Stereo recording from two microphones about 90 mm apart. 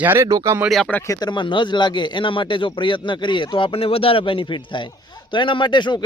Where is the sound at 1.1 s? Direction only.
50° left (ahead or behind).